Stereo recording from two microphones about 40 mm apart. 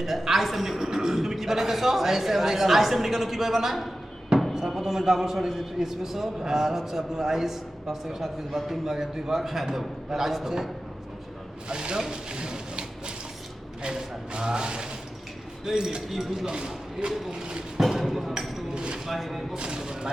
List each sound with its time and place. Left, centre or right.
0.0 s a man's voice: centre
11.7 s speech: centre
12.1 s a sound: right
13.8 s a man's voice: centre
16.0 s a man's voice: centre
16.5 s speech: centre
17.7 s speech: centre
18.7 s a sound: right
19.0 s a man's voice: centre
19.5 s a man's voice: right